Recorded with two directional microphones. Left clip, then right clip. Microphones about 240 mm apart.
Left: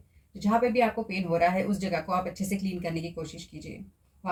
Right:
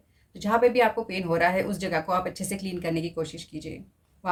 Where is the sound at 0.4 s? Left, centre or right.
Centre.